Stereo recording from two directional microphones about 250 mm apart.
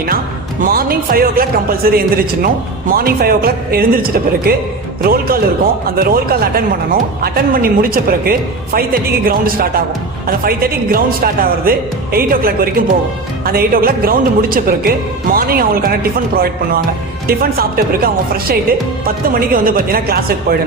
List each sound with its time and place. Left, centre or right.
0.6 s speech: right